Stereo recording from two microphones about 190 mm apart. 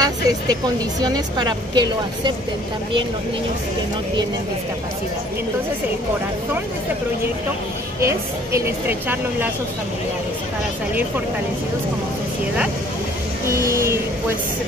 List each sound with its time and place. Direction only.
0.0 s vehicle: 20° right (ahead or behind)
1.0 s a woman's voice: 20° right (ahead or behind)
8.0 s a woman's voice: 15° right (ahead or behind)
13.7 s a woman's voice: 15° right (ahead or behind)